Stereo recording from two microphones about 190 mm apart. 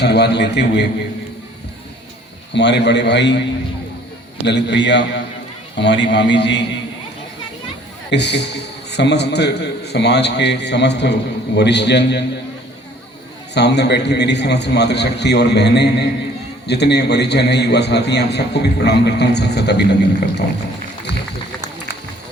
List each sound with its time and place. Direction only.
0.0 s a man's voice: 60° left (ahead or behind)
2.5 s a man's voice: 65° left (ahead or behind)
4.4 s a man's voice: 65° left (ahead or behind)
8.1 s a man's voice: 65° left (ahead or behind)
13.5 s a man's voice: 65° left (ahead or behind)